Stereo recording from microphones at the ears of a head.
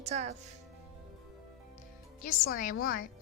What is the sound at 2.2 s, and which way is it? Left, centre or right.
Speech, left.